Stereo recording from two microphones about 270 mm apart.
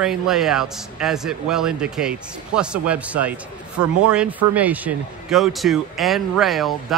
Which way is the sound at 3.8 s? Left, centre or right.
Right.